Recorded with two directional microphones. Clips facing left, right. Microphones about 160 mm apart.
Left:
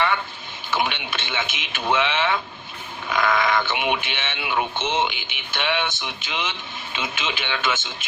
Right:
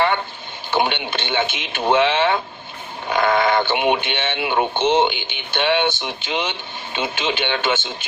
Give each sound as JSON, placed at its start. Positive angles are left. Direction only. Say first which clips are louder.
{"t": 0.7, "sound": "a man's voice", "louder": "right 5 dB", "side_deg": -30}